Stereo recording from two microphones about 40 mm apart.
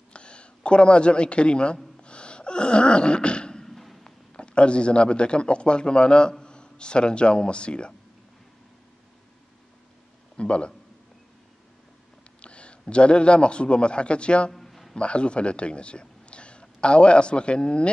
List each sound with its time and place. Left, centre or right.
0.1 s speech: left
2.0 s gasp: left
3.6 s a sound: centre
4.0 s a man's voice: left
10.3 s a man's voice: left
12.4 s a sound: left
12.8 s a man's voice: left
14.5 s music: centre
15.0 s a man's voice: left